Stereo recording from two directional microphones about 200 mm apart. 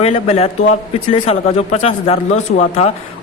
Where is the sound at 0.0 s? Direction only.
30° left (ahead or behind).